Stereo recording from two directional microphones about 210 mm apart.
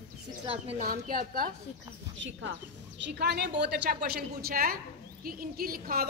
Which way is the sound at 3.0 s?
50° right (ahead or behind).